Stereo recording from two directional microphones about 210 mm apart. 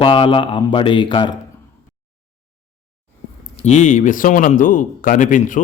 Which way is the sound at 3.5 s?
35° left (ahead or behind).